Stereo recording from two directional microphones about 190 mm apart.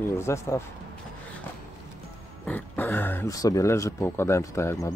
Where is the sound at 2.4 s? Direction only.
10° left (ahead or behind).